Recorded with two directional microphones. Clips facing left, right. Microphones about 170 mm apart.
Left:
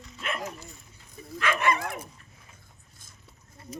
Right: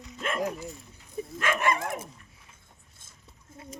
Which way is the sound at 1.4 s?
45° right (ahead or behind).